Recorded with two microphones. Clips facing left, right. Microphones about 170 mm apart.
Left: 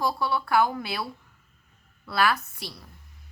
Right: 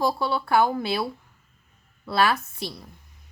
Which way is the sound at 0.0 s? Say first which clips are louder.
Right 2 dB; 25° right (ahead or behind).